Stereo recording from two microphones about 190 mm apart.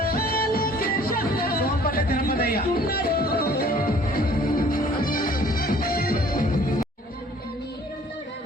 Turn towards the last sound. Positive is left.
turn(degrees=45)  # may be behind; listen again after turning